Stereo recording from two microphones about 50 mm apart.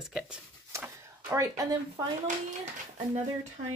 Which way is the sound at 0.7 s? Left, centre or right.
Right.